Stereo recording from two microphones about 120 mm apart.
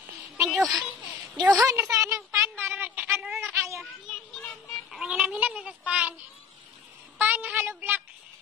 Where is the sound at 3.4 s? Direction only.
20° right (ahead or behind).